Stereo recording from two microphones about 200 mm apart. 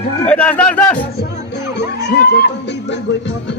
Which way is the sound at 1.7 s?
55° left (ahead or behind).